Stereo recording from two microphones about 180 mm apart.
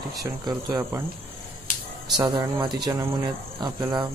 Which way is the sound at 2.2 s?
25° right (ahead or behind).